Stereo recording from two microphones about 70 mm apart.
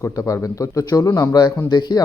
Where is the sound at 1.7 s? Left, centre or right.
Left.